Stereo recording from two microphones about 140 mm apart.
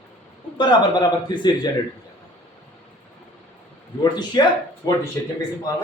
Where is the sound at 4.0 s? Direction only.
30° left (ahead or behind).